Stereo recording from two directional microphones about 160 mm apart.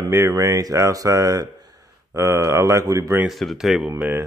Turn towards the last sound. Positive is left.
turn(degrees=-15)  # may be behind; listen again after turning